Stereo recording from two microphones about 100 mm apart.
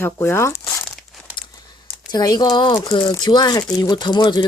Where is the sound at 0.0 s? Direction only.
25° left (ahead or behind).